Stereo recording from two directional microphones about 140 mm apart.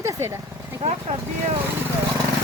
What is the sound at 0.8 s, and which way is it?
Speech, 45° right (ahead or behind).